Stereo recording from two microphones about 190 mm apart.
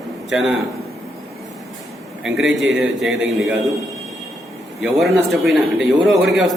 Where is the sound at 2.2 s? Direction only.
Centre (ahead or behind).